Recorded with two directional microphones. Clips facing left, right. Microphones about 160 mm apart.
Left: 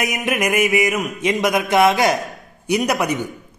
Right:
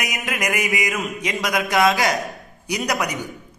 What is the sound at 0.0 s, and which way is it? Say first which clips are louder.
Mantra: left 5 dB; 25° left (ahead or behind).